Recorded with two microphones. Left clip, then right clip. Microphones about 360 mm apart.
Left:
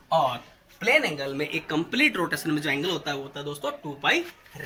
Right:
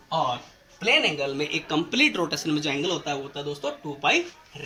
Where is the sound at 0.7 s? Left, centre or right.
Centre.